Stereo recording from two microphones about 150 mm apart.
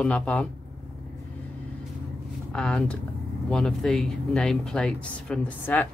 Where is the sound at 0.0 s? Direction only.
10° left (ahead or behind).